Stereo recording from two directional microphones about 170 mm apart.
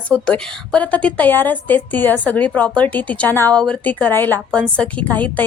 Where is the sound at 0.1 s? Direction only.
5° left (ahead or behind).